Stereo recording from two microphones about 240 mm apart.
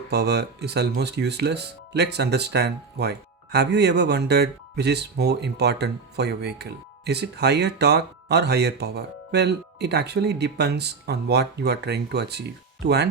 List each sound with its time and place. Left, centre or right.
0.1 s speech: right